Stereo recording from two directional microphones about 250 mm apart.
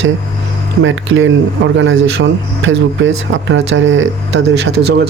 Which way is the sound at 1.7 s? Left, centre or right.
Right.